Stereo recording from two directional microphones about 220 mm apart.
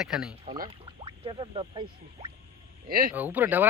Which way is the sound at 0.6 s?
25° right (ahead or behind).